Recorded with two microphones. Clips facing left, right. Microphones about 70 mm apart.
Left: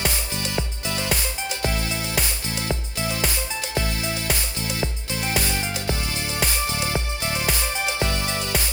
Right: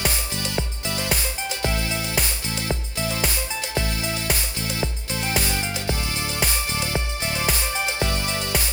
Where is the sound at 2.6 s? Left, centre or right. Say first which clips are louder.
Even; left.